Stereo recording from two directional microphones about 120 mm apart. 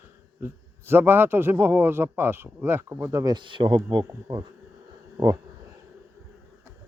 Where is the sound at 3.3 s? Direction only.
40° right (ahead or behind).